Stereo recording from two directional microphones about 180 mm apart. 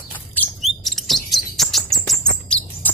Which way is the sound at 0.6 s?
Centre (ahead or behind).